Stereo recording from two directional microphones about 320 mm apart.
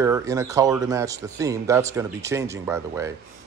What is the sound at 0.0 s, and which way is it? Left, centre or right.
A man's voice, centre.